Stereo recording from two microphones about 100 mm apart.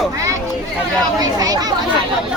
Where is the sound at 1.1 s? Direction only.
40° right (ahead or behind).